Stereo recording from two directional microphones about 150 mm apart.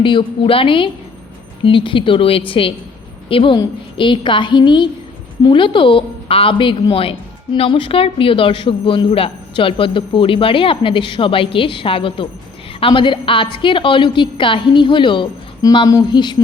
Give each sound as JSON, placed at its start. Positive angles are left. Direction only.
{"t": 0.0, "sound": "a woman's voice", "side_deg": 35}